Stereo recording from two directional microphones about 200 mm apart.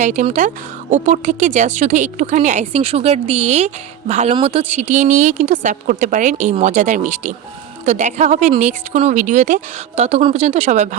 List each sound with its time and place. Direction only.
0.0 s speech: 40° right (ahead or behind)